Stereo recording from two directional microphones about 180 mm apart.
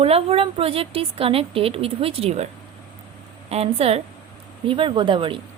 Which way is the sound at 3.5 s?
35° right (ahead or behind).